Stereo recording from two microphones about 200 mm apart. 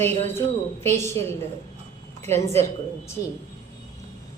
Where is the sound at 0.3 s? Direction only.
10° left (ahead or behind).